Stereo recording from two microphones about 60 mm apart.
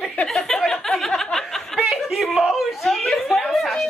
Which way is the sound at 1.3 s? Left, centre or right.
Centre.